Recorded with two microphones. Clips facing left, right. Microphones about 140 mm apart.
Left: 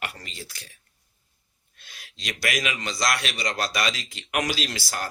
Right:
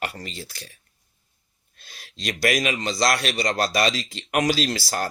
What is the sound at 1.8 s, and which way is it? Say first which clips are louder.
A man's voice: right 6 dB; 35° right (ahead or behind).